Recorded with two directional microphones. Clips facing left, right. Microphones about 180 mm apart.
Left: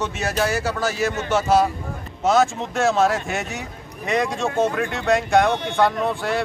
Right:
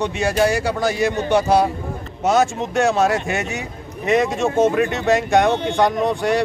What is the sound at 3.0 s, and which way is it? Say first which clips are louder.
A man's voice: right 2 dB; centre (ahead or behind).